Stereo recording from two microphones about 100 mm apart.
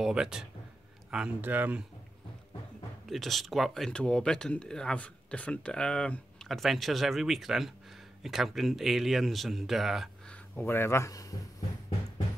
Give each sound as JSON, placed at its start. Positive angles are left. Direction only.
{"t": 0.0, "sound": "speech", "side_deg": -5}
{"t": 3.1, "sound": "speech", "side_deg": 0}
{"t": 10.5, "sound": "speech", "side_deg": 20}